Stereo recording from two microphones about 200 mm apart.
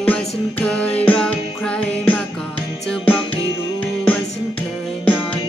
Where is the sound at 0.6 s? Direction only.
5° left (ahead or behind).